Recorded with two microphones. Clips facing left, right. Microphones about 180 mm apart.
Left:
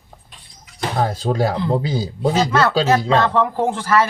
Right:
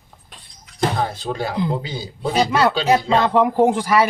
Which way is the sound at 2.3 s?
15° right (ahead or behind).